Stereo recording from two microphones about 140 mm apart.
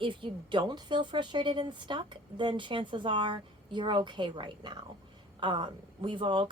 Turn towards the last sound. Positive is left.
turn(degrees=-35)  # may be behind; listen again after turning